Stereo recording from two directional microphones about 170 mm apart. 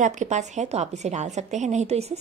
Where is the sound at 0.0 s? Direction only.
45° right (ahead or behind).